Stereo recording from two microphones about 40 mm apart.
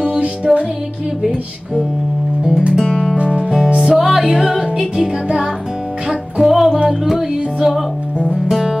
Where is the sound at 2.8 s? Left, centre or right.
Centre.